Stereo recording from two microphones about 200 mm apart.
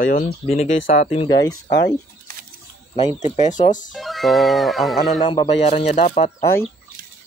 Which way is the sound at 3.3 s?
35° left (ahead or behind).